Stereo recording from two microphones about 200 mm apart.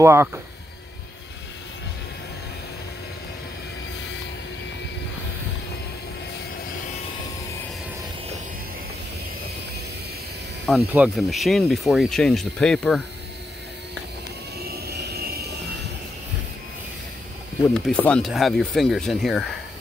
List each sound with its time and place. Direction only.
0.0 s speech: 10° right (ahead or behind)
10.9 s speech: 5° right (ahead or behind)
14.7 s vehicle: 50° right (ahead or behind)
17.6 s speech: 5° left (ahead or behind)